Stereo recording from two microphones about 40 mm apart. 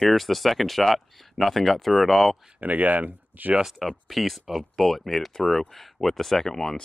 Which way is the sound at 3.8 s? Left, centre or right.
Centre.